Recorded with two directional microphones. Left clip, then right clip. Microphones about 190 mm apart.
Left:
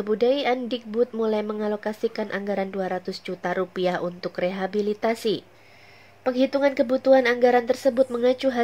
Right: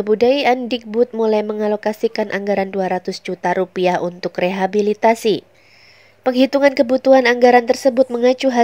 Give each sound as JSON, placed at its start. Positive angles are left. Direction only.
{"t": 0.0, "sound": "speech", "side_deg": -30}